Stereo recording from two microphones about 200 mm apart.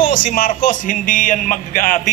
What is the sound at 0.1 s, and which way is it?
A man's voice, 40° left (ahead or behind).